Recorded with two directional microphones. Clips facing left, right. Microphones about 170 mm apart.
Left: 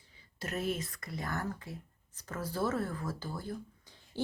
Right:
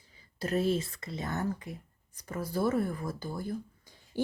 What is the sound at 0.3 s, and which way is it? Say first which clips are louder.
Speech: right 7 dB; 30° right (ahead or behind).